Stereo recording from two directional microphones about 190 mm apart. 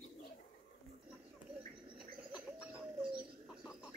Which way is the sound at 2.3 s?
5° right (ahead or behind).